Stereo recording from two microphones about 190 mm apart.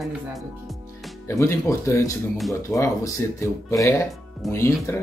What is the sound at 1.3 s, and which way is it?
Speech, 15° left (ahead or behind).